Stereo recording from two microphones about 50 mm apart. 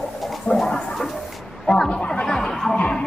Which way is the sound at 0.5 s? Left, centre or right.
Centre.